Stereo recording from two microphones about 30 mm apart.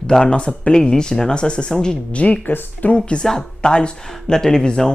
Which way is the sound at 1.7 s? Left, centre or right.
Left.